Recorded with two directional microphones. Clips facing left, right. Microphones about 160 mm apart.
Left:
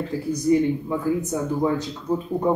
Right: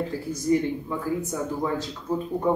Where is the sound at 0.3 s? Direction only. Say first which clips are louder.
Left 5 dB; 20° left (ahead or behind).